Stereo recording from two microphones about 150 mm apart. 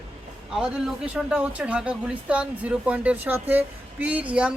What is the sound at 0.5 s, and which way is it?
Speech, 5° right (ahead or behind).